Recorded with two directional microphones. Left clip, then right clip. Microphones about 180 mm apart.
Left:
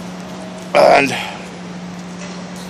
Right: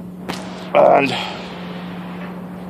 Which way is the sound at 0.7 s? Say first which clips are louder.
Left 2 dB; 20° left (ahead or behind).